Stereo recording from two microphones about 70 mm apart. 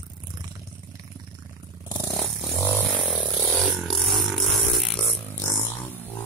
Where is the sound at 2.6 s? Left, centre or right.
Left.